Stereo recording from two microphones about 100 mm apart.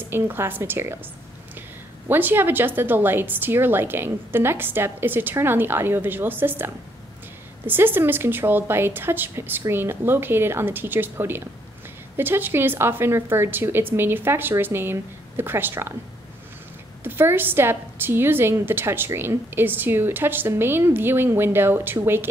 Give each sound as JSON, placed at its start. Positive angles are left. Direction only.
{"t": 0.1, "sound": "a woman's voice", "side_deg": -20}
{"t": 2.0, "sound": "a woman's voice", "side_deg": -20}
{"t": 17.0, "sound": "a woman's voice", "side_deg": -20}